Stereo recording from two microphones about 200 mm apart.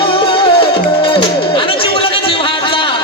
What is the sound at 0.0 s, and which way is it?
Music, 25° left (ahead or behind).